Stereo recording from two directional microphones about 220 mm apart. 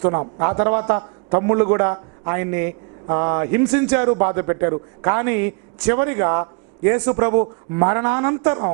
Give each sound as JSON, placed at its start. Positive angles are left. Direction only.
{"t": 0.0, "sound": "a man's voice", "side_deg": -25}
{"t": 7.3, "sound": "a man's voice", "side_deg": -30}
{"t": 7.9, "sound": "a man's voice", "side_deg": -15}